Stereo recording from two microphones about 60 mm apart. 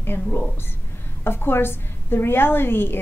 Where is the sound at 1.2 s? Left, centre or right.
Left.